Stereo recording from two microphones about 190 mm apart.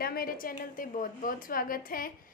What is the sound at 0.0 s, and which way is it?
A woman's voice, 50° left (ahead or behind).